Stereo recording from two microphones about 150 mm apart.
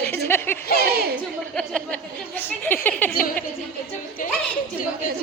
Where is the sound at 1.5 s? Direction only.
5° left (ahead or behind).